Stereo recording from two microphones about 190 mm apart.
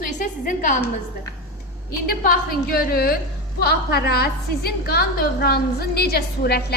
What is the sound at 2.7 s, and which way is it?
A woman's voice, 55° left (ahead or behind).